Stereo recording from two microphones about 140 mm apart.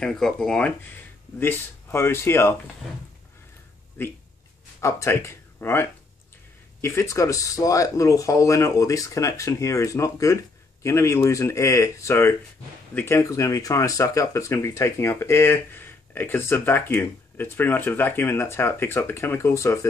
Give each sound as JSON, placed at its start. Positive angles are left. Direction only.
{"t": 0.0, "sound": "speech", "side_deg": 5}
{"t": 4.7, "sound": "speech", "side_deg": 20}